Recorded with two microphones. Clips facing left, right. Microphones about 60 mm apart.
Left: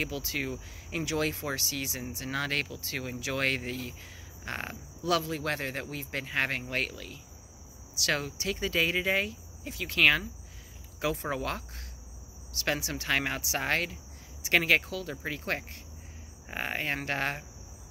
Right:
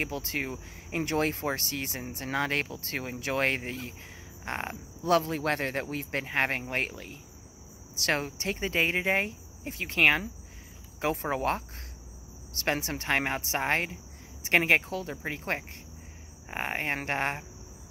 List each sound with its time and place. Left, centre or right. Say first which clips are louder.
0.0 s speech: right 1 dB; right